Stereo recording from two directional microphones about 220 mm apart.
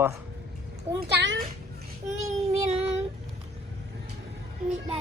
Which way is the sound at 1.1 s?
55° right (ahead or behind).